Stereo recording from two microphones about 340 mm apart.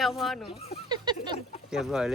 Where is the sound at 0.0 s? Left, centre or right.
Centre.